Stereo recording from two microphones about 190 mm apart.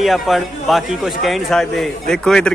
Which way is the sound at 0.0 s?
Centre (ahead or behind).